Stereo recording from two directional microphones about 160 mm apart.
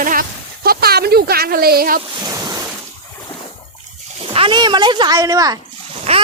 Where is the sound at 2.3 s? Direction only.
20° right (ahead or behind).